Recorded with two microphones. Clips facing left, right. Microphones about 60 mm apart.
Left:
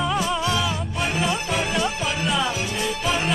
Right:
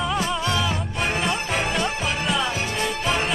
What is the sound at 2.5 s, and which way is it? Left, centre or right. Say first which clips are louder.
Music: even; right.